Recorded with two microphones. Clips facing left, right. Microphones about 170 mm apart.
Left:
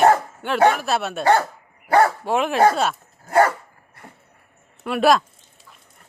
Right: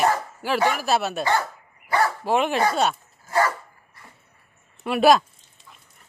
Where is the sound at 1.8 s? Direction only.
55° left (ahead or behind).